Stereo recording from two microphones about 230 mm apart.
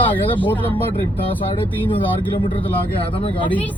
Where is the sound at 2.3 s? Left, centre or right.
Left.